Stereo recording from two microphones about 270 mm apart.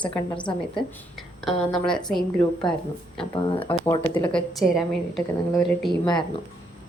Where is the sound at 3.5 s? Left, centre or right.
Centre.